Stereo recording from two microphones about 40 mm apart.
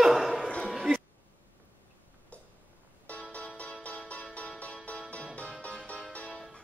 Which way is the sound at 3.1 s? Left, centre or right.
Left.